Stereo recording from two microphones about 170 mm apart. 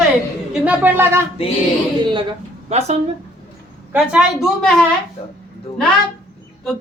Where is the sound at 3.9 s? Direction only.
5° right (ahead or behind).